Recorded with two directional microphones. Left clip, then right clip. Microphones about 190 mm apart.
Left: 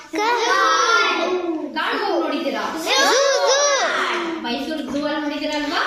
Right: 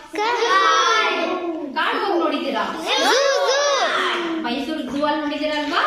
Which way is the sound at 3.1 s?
5° left (ahead or behind).